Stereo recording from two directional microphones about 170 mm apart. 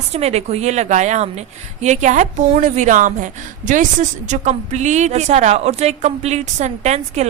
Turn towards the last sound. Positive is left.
turn(degrees=-40)  # may be behind; listen again after turning